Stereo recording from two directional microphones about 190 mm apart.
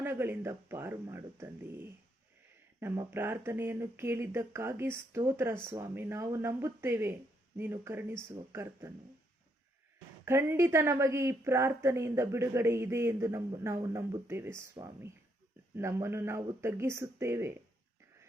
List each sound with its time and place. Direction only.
0.0 s speech: 10° right (ahead or behind)
10.2 s speech: 15° right (ahead or behind)